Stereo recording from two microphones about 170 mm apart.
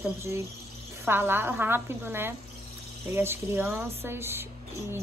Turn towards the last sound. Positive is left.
turn(degrees=-15)  # may be behind; listen again after turning